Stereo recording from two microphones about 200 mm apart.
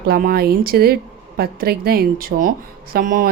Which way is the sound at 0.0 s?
50° right (ahead or behind).